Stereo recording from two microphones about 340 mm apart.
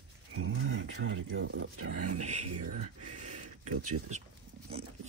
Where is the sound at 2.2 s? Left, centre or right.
Right.